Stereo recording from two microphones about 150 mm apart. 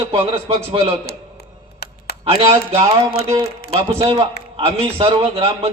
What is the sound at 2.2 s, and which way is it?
A man's voice, 40° right (ahead or behind).